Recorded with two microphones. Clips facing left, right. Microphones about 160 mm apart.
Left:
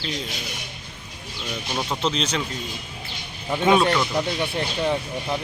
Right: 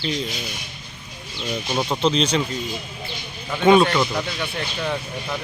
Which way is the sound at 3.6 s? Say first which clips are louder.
Right 4 dB; centre (ahead or behind).